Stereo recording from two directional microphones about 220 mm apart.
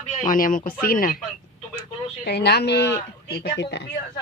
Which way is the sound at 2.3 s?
50° left (ahead or behind).